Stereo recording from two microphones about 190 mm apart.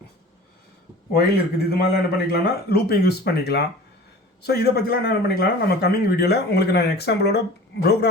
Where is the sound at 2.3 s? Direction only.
55° left (ahead or behind).